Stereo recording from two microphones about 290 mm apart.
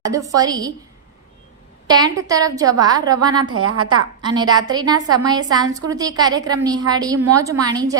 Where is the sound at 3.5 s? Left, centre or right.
Right.